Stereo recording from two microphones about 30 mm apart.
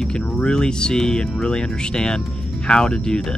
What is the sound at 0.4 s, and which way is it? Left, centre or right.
Speech, left.